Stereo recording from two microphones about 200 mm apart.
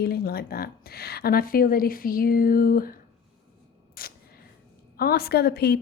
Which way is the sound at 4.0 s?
50° left (ahead or behind).